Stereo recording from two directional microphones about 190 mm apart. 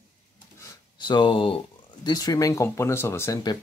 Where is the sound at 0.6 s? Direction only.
20° left (ahead or behind).